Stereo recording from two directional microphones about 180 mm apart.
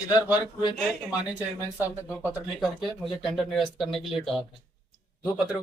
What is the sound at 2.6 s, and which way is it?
Speech, centre (ahead or behind).